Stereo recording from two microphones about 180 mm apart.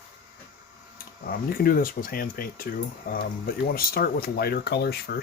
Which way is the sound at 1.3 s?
55° left (ahead or behind).